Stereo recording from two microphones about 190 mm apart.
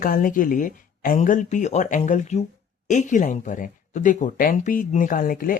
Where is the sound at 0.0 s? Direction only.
45° left (ahead or behind).